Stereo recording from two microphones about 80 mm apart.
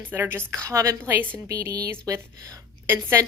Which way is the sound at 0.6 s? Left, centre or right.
Right.